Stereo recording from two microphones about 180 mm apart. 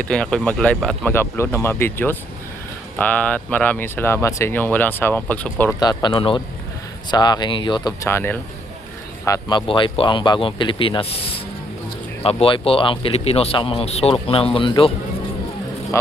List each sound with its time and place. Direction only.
0.0 s speech: 5° left (ahead or behind)
5.8 s speech: 25° left (ahead or behind)